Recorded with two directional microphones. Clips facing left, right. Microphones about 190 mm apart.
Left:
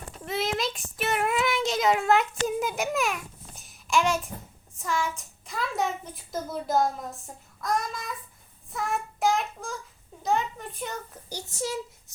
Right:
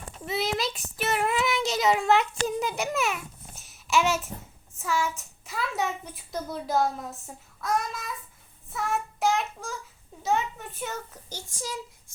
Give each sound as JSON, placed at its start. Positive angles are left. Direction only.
{"t": 0.3, "sound": "child singing", "side_deg": 0}
{"t": 4.8, "sound": "a child's voice", "side_deg": -5}
{"t": 8.7, "sound": "child singing", "side_deg": 0}
{"t": 10.2, "sound": "a child's voice", "side_deg": -5}
{"t": 11.3, "sound": "speech", "side_deg": 20}